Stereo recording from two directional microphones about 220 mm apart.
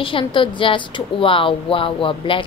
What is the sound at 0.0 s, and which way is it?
A woman's voice, 25° left (ahead or behind).